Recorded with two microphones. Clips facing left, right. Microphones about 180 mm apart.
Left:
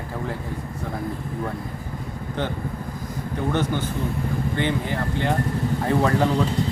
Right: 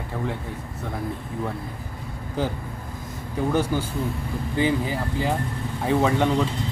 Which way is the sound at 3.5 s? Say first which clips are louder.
Right 1 dB; 10° right (ahead or behind).